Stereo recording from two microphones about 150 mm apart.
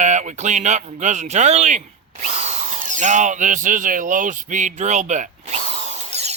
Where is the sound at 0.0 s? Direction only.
55° right (ahead or behind).